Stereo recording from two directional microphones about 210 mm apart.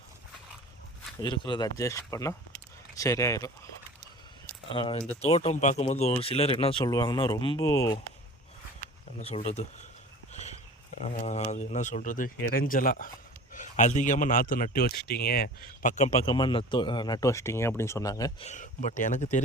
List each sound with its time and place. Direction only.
1.2 s speech: 20° left (ahead or behind)
4.7 s speech: 25° left (ahead or behind)
9.2 s speech: 30° left (ahead or behind)
11.0 s speech: 30° left (ahead or behind)
16.3 s speech: 25° left (ahead or behind)
18.4 s speech: 35° left (ahead or behind)